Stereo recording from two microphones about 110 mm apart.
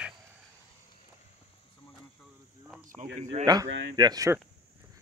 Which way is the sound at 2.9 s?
90° right.